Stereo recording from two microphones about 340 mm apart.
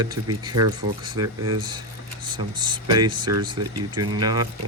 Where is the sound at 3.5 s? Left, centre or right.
Right.